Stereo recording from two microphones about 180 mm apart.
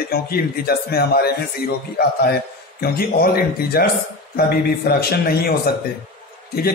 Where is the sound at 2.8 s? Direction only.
60° left (ahead or behind).